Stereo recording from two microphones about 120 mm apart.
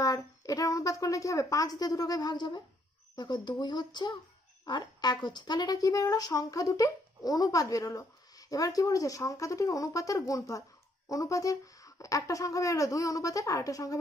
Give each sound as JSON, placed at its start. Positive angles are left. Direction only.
{"t": 0.0, "sound": "speech", "side_deg": 30}